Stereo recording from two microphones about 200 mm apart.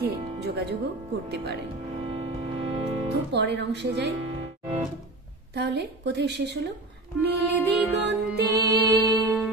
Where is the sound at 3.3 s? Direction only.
60° right (ahead or behind).